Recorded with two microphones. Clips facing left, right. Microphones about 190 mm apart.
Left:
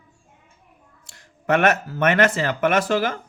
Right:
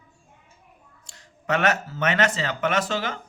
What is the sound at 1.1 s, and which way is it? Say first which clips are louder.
Speech: left 5 dB; 55° left (ahead or behind).